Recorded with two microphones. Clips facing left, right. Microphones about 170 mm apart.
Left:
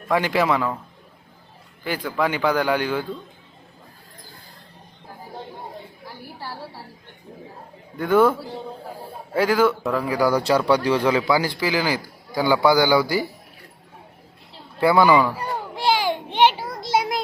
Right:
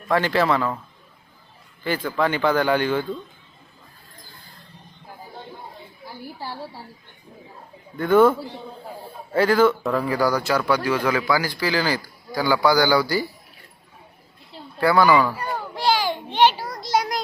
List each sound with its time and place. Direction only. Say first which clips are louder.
0.1 s speech: even; 10° left (ahead or behind)
1.8 s speech: right 1 dB; 10° left (ahead or behind)
7.9 s a man's voice: right 2 dB; 10° left (ahead or behind)
14.8 s a man's voice: left 1 dB; 20° left (ahead or behind)
15.4 s a sound: even; 20° left (ahead or behind)